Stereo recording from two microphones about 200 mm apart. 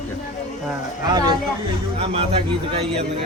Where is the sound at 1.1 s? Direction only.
20° right (ahead or behind).